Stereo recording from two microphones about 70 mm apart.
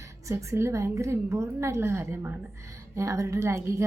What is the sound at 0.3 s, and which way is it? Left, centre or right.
A woman's voice, right.